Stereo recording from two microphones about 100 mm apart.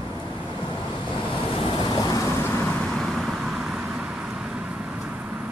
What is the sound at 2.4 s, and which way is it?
Vehicle, 25° left (ahead or behind).